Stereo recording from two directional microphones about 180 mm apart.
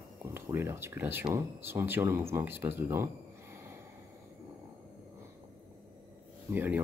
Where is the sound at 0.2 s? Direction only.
15° right (ahead or behind).